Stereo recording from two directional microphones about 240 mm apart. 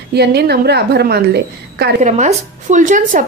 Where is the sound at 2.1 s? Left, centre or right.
Right.